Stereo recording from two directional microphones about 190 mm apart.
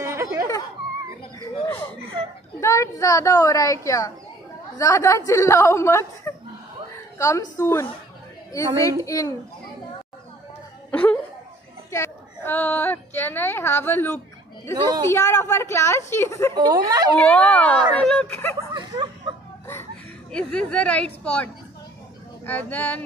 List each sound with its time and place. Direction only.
0.0 s a sound: 15° right (ahead or behind)
1.4 s a sound: 15° left (ahead or behind)
2.6 s a woman's voice: 15° left (ahead or behind)
10.9 s a woman's voice: 10° left (ahead or behind)
16.5 s speech: 20° right (ahead or behind)
17.2 s a woman's voice: 5° left (ahead or behind)
18.7 s a sound: 25° right (ahead or behind)
19.7 s speech: 10° left (ahead or behind)
22.5 s a woman's voice: 10° left (ahead or behind)